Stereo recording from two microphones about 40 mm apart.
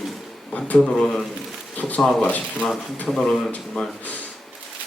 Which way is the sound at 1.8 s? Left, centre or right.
Left.